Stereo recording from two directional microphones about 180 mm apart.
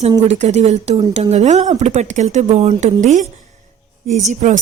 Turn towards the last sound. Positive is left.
turn(degrees=-40)  # may be behind; listen again after turning